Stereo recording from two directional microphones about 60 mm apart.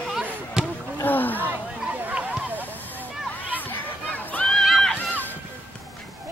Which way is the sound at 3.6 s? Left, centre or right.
Left.